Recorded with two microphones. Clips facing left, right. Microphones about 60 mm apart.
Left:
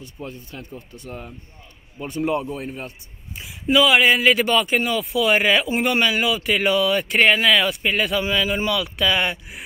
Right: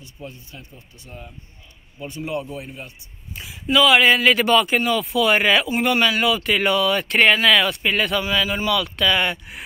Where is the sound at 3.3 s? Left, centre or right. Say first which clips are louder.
Left 1 dB; centre.